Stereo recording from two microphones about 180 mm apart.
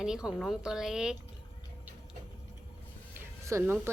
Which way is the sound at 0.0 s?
5° right (ahead or behind).